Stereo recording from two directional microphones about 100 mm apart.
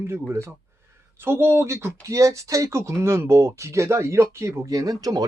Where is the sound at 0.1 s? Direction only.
25° right (ahead or behind).